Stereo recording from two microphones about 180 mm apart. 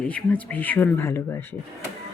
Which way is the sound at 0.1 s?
10° left (ahead or behind).